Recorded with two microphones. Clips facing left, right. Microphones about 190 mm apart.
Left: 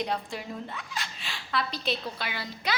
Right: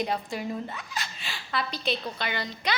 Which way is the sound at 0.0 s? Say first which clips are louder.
Right 2 dB; centre (ahead or behind).